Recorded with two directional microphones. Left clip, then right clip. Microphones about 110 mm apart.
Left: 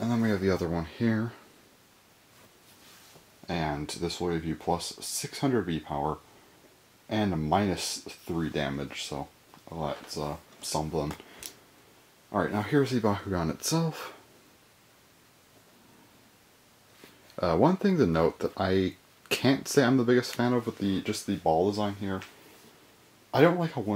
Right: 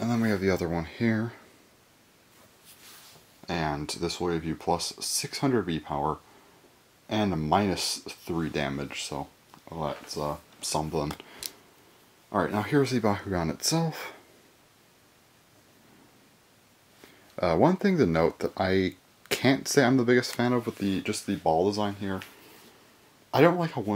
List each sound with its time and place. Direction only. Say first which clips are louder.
0.0 s speech: right 1 dB; 25° right (ahead or behind)
3.4 s speech: right 2 dB; 35° right (ahead or behind)
12.3 s speech: right 1 dB; 35° right (ahead or behind); by 14.1 s 20° right (ahead or behind)
17.4 s speech: right 1 dB; 20° right (ahead or behind)
23.3 s speech: right 1 dB; 30° right (ahead or behind)